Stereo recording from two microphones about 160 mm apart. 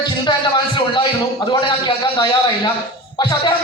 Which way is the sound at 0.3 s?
30° left (ahead or behind).